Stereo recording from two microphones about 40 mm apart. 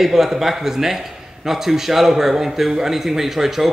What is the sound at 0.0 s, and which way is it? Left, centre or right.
A man's voice, centre.